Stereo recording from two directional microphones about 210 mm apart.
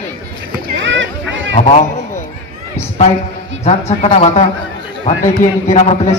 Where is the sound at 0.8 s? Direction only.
60° right (ahead or behind).